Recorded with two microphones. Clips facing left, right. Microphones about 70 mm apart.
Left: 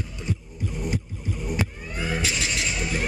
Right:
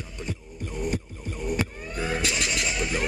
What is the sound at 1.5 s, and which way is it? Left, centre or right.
Vehicle, right.